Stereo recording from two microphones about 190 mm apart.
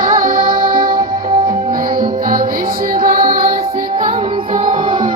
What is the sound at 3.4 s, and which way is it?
Music, 30° right (ahead or behind).